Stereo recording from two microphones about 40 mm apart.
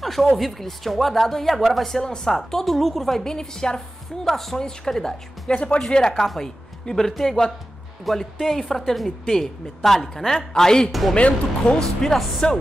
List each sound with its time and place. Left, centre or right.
0.0 s a sound: centre
0.4 s a woman's voice: centre
5.5 s speech: left
5.9 s a woman's voice: centre
10.9 s a woman's voice: centre
11.1 s speech: left
11.7 s a woman's voice: centre